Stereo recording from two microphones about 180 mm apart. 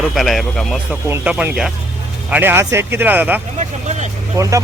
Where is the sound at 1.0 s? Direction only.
10° right (ahead or behind).